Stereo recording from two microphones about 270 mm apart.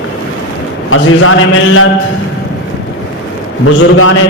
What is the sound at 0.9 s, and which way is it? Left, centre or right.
Speech, left.